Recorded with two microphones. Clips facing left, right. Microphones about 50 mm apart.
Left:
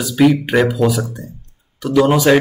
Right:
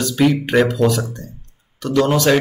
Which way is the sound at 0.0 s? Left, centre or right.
Centre.